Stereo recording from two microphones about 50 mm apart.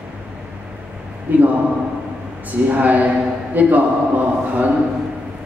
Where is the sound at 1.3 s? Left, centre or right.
Right.